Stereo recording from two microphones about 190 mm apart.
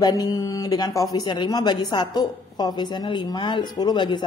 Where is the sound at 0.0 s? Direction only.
20° left (ahead or behind).